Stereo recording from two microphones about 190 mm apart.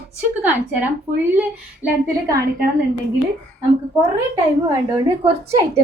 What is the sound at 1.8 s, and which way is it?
Speech, 15° right (ahead or behind).